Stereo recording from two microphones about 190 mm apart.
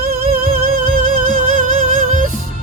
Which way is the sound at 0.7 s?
45° right (ahead or behind).